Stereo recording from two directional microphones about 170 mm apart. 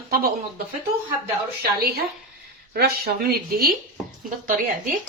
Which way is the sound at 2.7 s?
65° right (ahead or behind).